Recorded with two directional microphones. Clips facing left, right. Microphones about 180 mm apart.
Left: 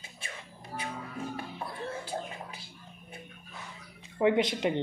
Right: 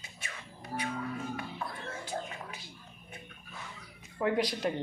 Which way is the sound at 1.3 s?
30° left (ahead or behind).